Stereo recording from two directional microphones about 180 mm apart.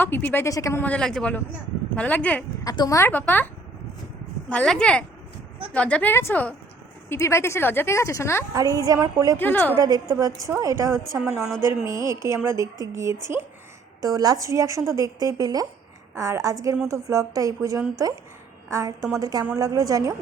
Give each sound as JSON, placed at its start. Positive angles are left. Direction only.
{"t": 0.0, "sound": "a woman's voice", "side_deg": 10}
{"t": 2.6, "sound": "a woman's voice", "side_deg": 20}
{"t": 8.5, "sound": "a woman's voice", "side_deg": -20}
{"t": 9.4, "sound": "a woman's voice", "side_deg": 10}
{"t": 9.7, "sound": "a woman's voice", "side_deg": -20}
{"t": 11.2, "sound": "a woman's voice", "side_deg": -5}
{"t": 11.6, "sound": "a woman's voice", "side_deg": -15}